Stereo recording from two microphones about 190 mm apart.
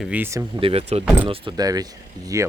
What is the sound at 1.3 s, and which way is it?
Speech, 20° right (ahead or behind).